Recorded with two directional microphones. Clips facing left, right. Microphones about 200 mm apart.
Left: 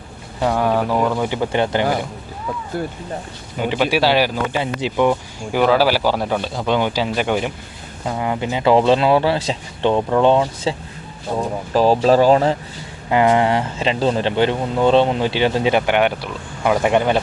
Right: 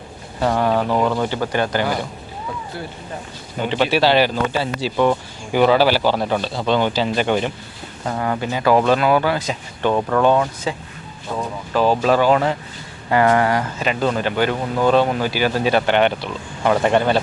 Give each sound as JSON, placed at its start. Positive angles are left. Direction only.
{"t": 0.4, "sound": "speech", "side_deg": 5}
{"t": 1.3, "sound": "speech", "side_deg": 20}
{"t": 2.8, "sound": "speech", "side_deg": 50}
{"t": 3.6, "sound": "speech", "side_deg": 10}
{"t": 5.5, "sound": "speech", "side_deg": 0}
{"t": 13.1, "sound": "speech", "side_deg": 15}